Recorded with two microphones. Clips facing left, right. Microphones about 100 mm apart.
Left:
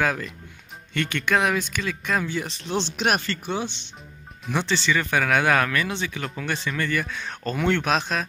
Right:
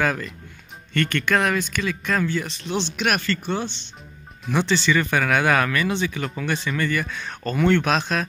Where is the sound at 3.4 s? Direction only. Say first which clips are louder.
Right 2 dB; 10° left (ahead or behind).